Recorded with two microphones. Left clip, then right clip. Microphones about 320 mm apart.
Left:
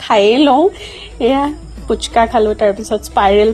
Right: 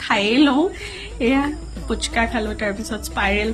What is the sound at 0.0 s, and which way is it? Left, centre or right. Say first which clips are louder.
Speech: left 7 dB; centre.